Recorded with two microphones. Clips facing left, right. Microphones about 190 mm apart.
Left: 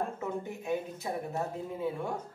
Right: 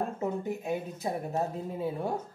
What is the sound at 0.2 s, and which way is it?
A woman's voice, 35° right (ahead or behind).